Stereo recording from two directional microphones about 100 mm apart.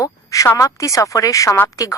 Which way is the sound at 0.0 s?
35° left (ahead or behind).